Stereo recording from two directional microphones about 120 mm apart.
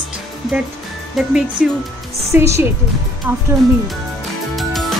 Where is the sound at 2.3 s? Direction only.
20° right (ahead or behind).